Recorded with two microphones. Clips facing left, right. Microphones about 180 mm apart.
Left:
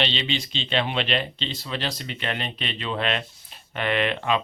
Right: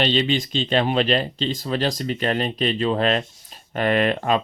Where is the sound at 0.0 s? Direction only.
45° right (ahead or behind).